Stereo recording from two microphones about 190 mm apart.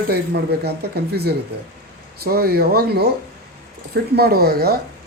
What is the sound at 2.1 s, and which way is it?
Speech, 55° right (ahead or behind).